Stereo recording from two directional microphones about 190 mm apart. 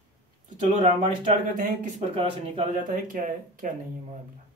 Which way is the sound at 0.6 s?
40° right (ahead or behind).